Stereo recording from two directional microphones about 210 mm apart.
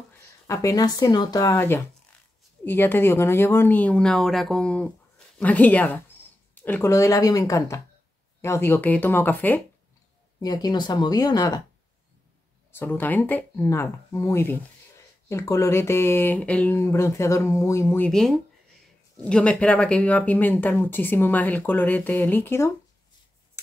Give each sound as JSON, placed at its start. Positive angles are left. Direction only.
{"t": 0.5, "sound": "speech", "side_deg": 15}
{"t": 12.7, "sound": "speech", "side_deg": 10}